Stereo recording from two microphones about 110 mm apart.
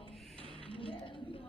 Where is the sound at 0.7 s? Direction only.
55° left (ahead or behind).